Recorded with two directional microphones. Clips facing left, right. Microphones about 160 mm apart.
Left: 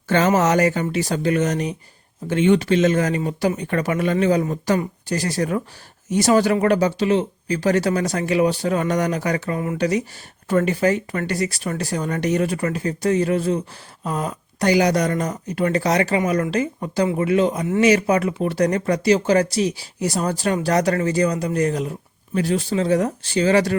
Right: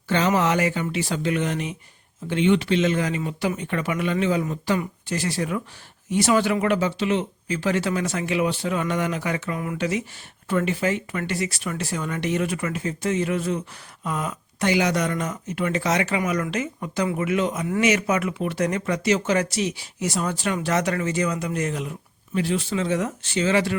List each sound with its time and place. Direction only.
0.1 s speech: 45° left (ahead or behind)